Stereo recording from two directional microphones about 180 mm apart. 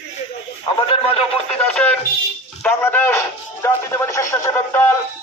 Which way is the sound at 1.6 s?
10° left (ahead or behind).